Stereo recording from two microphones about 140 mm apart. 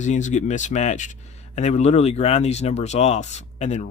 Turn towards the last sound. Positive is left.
turn(degrees=55)  # may be behind; listen again after turning